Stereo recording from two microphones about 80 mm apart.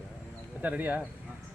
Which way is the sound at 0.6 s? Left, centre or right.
Right.